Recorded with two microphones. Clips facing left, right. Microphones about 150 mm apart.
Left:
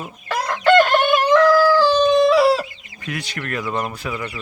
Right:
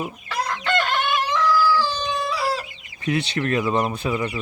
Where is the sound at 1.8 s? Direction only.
90° left.